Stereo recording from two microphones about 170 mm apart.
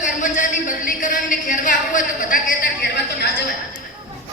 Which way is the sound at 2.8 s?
70° left (ahead or behind).